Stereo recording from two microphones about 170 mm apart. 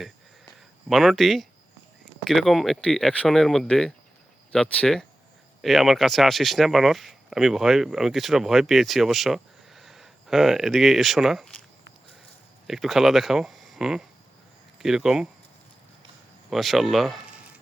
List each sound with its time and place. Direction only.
0.9 s speech: centre (ahead or behind)
12.6 s speech: centre (ahead or behind)
16.5 s speech: centre (ahead or behind)